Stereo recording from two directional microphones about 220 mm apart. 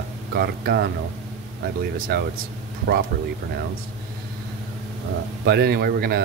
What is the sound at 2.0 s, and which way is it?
Speech, 45° right (ahead or behind).